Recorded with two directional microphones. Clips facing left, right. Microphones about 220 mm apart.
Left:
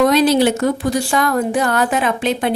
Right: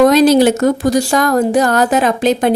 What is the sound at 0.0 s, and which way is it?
A woman's voice, 45° right (ahead or behind).